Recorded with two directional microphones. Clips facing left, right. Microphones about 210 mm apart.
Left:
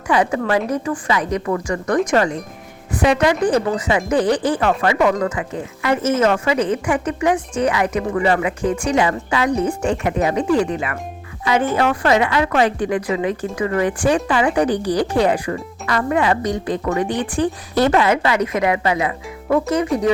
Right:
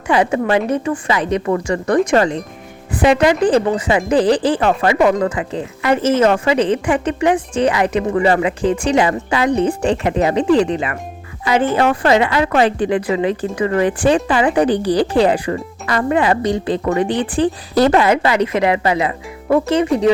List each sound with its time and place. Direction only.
0.1 s speech: 25° right (ahead or behind)